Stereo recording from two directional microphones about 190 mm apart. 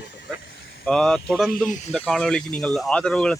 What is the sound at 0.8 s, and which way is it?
Speech, centre (ahead or behind).